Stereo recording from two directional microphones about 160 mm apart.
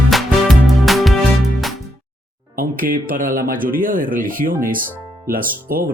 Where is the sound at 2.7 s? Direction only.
60° right (ahead or behind).